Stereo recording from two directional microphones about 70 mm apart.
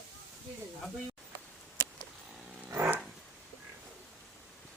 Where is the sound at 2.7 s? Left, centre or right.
Right.